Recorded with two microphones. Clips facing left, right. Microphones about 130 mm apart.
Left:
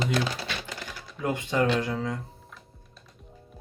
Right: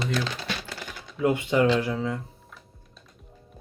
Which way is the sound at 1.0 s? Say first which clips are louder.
Right 8 dB; centre (ahead or behind).